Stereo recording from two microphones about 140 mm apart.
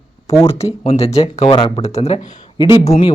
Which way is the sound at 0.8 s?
45° left (ahead or behind).